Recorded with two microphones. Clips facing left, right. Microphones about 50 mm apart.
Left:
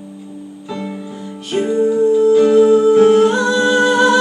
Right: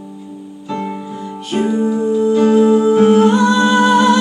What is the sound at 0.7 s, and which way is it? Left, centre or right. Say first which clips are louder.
Music: right 3 dB; centre.